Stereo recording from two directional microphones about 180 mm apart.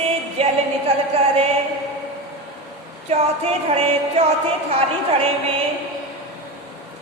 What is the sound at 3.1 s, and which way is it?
Music, 35° right (ahead or behind).